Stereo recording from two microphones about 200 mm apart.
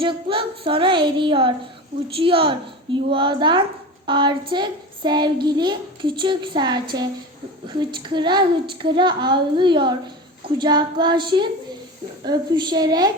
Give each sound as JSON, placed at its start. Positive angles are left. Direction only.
{"t": 0.0, "sound": "speech", "side_deg": -25}